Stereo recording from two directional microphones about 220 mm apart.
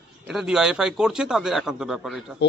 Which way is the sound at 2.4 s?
50° left (ahead or behind).